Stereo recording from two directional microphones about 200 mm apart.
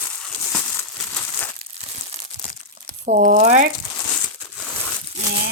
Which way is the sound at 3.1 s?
40° right (ahead or behind).